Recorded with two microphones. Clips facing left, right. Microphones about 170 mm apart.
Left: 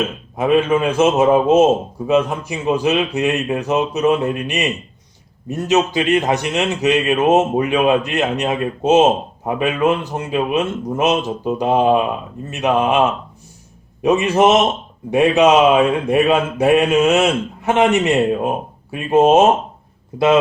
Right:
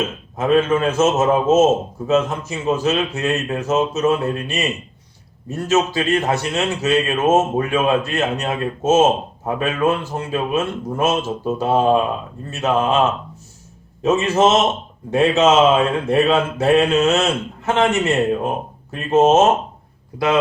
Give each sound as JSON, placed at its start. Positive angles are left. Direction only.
{"t": 0.3, "sound": "a man's voice", "side_deg": 10}
{"t": 20.1, "sound": "a man's voice", "side_deg": 25}